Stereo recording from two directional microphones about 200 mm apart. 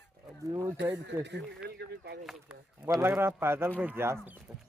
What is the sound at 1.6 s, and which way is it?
Speech, 55° right (ahead or behind).